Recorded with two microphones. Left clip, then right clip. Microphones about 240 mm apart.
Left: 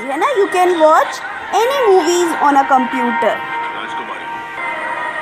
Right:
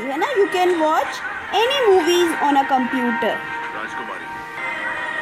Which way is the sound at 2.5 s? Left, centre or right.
Centre.